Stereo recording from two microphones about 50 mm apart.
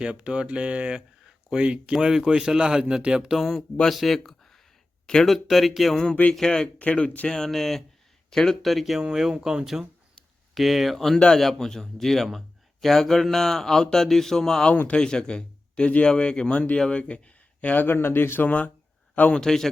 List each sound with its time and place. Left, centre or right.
0.0 s speech: centre
3.8 s speech: centre
5.2 s speech: centre
6.3 s speech: centre
6.7 s speech: left
7.3 s speech: centre
9.0 s speech: centre
10.5 s speech: centre; by 17.8 s left
17.8 s speech: left
18.4 s speech: left
19.3 s speech: centre